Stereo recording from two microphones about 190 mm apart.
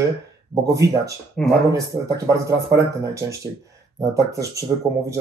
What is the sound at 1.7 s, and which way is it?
Speech, 15° right (ahead or behind).